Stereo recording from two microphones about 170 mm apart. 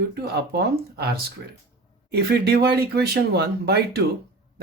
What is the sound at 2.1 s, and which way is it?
Speech, 70° right (ahead or behind).